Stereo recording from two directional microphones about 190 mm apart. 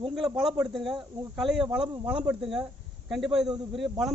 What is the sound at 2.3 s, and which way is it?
Speech, 5° right (ahead or behind).